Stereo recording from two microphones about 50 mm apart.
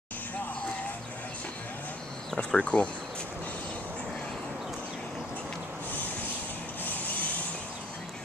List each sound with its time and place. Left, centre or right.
2.3 s speech: left
6.8 s mechanisms: left